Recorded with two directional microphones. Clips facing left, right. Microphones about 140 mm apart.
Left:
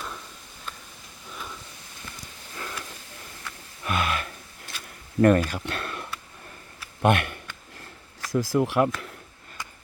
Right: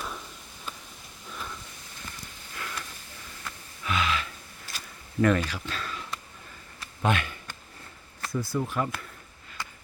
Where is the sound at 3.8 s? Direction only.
55° left (ahead or behind).